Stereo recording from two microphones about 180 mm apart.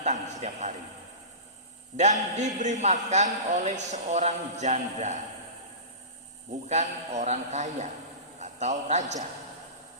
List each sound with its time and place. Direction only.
0.0 s a sound: 40° right (ahead or behind)
2.0 s a man's voice: 40° right (ahead or behind)
6.7 s a man's voice: 40° right (ahead or behind)